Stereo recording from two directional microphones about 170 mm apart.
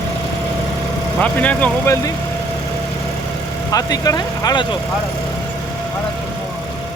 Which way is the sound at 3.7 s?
20° left (ahead or behind).